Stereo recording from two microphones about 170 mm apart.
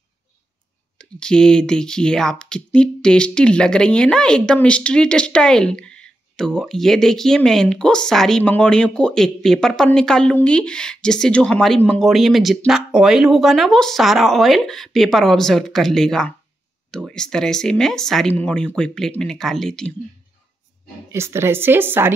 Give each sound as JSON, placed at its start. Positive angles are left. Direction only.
{"t": 0.9, "sound": "speech", "side_deg": 5}
{"t": 21.1, "sound": "speech", "side_deg": -15}